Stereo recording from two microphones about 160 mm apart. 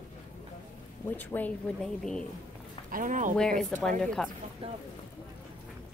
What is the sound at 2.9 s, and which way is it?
Speech, 55° right (ahead or behind).